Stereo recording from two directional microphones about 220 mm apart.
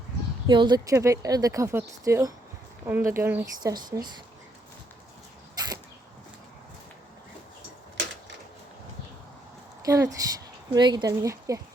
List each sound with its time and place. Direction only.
0.4 s speech: 20° right (ahead or behind)
5.5 s a sound: 15° right (ahead or behind)
9.8 s speech: 15° right (ahead or behind)